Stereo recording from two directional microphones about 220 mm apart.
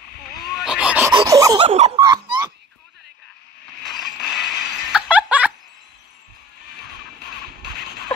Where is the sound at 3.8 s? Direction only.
Centre (ahead or behind).